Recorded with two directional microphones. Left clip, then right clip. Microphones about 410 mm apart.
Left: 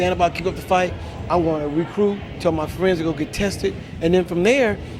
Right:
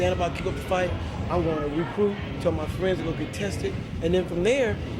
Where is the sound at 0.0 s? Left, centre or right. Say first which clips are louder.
Left 6 dB; left.